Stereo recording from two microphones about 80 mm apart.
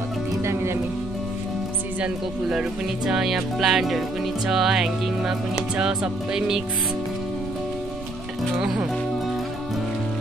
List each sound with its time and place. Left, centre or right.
0.4 s music: right
3.1 s music: centre
8.5 s music: centre